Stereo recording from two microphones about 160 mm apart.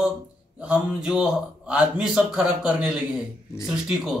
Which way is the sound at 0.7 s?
5° right (ahead or behind).